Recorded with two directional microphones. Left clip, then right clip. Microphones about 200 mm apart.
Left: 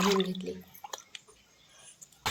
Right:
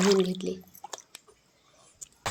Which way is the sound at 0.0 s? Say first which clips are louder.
Right 4 dB; 30° right (ahead or behind).